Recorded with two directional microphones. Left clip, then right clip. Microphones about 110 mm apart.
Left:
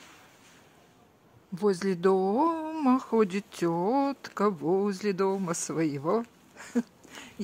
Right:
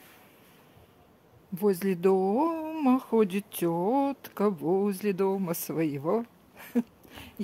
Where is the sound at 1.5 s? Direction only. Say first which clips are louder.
Even; 25° right (ahead or behind).